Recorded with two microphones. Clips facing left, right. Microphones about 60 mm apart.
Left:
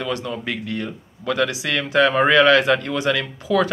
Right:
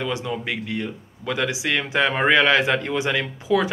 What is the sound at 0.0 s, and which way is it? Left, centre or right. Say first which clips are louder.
Speech: left 1 dB; centre.